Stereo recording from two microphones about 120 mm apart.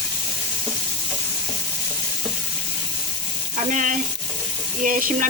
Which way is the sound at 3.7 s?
90° right.